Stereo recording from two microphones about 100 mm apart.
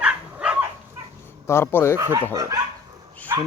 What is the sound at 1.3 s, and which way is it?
Speech, 25° left (ahead or behind).